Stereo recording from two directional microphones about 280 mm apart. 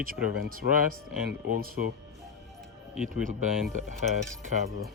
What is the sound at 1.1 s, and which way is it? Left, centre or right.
Speech, right.